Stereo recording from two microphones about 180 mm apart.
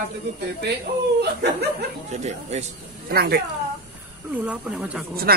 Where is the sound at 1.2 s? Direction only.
65° right (ahead or behind).